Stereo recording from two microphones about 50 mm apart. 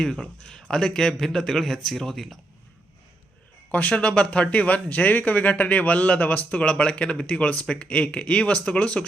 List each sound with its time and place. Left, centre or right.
0.0 s a man's voice: centre
3.7 s speech: left